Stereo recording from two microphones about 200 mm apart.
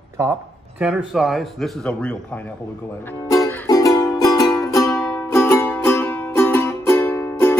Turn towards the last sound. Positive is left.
turn(degrees=15)  # may be behind; listen again after turning